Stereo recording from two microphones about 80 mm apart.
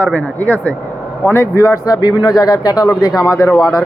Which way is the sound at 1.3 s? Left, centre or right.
Left.